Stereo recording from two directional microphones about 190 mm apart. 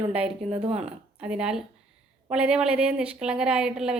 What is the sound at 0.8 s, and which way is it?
A woman's voice, 5° right (ahead or behind).